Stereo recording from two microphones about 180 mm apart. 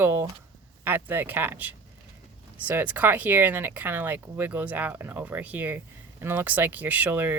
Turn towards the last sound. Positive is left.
turn(degrees=-10)  # may be behind; listen again after turning